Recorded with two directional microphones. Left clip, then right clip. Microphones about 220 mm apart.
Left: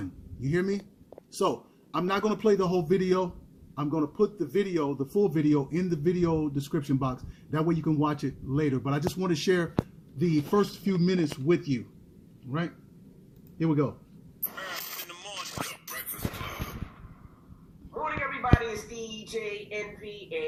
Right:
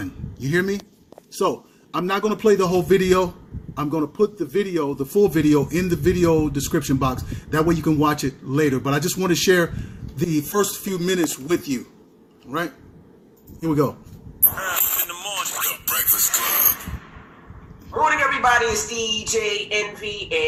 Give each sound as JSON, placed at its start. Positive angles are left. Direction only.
{"t": 0.4, "sound": "a man's voice", "side_deg": 0}
{"t": 14.7, "sound": "music", "side_deg": 0}
{"t": 17.9, "sound": "a sound", "side_deg": -15}
{"t": 19.3, "sound": "speech", "side_deg": -10}